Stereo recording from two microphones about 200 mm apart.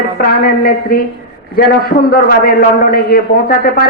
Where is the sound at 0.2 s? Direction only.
45° left (ahead or behind).